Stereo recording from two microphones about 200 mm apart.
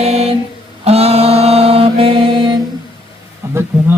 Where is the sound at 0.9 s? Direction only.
30° right (ahead or behind).